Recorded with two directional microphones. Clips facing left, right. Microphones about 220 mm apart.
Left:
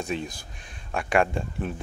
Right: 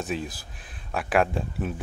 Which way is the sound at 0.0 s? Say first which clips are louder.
Even; 5° right (ahead or behind).